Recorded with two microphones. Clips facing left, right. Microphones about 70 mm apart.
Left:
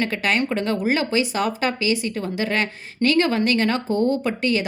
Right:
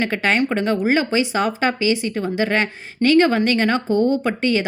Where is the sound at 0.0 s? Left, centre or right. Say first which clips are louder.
Right 3 dB; right.